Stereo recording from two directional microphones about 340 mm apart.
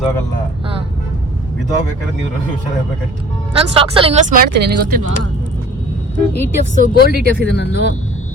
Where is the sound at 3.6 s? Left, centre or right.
Centre.